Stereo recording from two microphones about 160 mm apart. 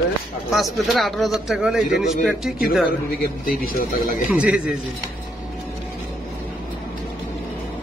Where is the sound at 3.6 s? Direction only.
65° left (ahead or behind).